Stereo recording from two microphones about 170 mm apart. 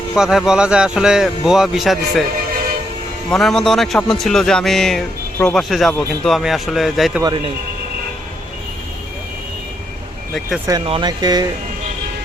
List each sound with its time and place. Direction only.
0.2 s a man's voice: 5° right (ahead or behind)
3.2 s a man's voice: centre (ahead or behind)
10.7 s speech: 30° right (ahead or behind)